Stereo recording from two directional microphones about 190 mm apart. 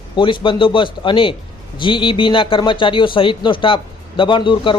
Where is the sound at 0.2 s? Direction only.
25° left (ahead or behind).